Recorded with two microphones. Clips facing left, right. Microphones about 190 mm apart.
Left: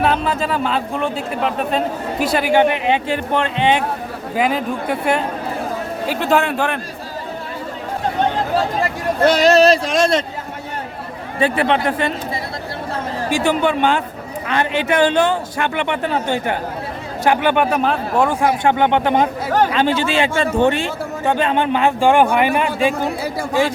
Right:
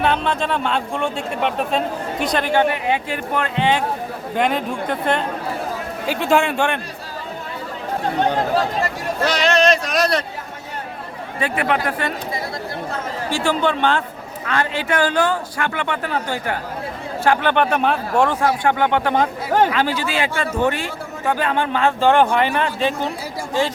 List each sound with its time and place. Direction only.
0.0 s a man's voice: 5° left (ahead or behind); by 3.8 s 20° left (ahead or behind)
4.4 s speech: 5° left (ahead or behind)
9.2 s speech: 55° left (ahead or behind)
9.5 s a man's voice: 35° left (ahead or behind)
11.3 s a man's voice: 30° left (ahead or behind)
13.3 s a man's voice: 15° left (ahead or behind)
17.2 s a man's voice: 10° left (ahead or behind)